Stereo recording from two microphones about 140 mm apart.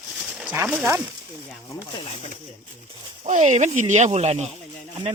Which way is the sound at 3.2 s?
60° right (ahead or behind).